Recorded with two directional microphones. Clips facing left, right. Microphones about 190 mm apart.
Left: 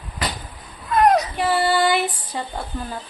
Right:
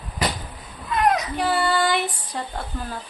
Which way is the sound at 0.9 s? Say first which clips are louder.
Left 4 dB; 40° left (ahead or behind).